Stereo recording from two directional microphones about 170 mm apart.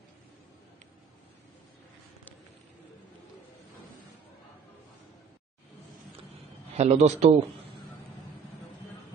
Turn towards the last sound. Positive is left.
turn(degrees=-40)  # may be behind; listen again after turning